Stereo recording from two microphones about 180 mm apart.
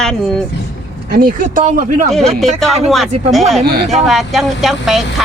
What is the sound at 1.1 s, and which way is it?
Speech, 50° right (ahead or behind).